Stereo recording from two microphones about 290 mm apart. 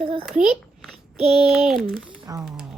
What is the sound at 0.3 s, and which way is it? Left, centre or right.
Speech, centre.